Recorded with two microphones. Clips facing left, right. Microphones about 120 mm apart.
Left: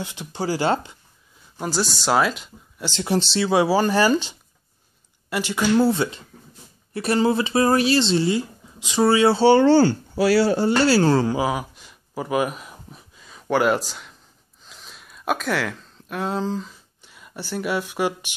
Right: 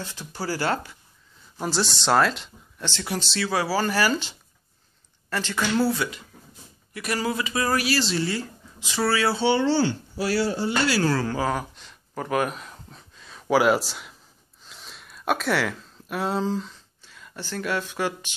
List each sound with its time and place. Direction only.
0.0 s speech: 20° left (ahead or behind)
1.6 s speech: centre (ahead or behind)
2.9 s speech: 25° left (ahead or behind)
5.9 s speech: 30° left (ahead or behind)
9.4 s speech: 50° left (ahead or behind)
10.1 s speech: 80° left
10.9 s speech: 30° left (ahead or behind)
11.3 s speech: 10° left (ahead or behind)
14.6 s a sound: centre (ahead or behind)
17.0 s speech: 15° left (ahead or behind)